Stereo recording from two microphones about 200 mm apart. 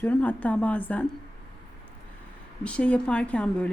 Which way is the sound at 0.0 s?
5° left (ahead or behind).